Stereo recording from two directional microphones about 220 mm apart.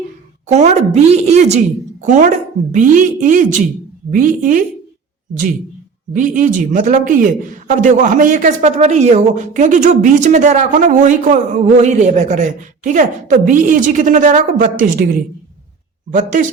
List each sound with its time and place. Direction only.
0.4 s a man's voice: 30° right (ahead or behind)
6.1 s a man's voice: 35° right (ahead or behind)